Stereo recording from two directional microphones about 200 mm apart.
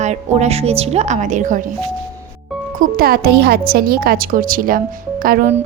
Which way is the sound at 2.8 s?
50° right (ahead or behind).